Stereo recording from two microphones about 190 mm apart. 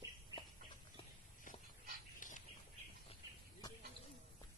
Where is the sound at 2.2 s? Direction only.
45° left (ahead or behind).